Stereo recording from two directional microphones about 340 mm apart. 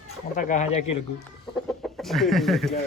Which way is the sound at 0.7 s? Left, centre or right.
Left.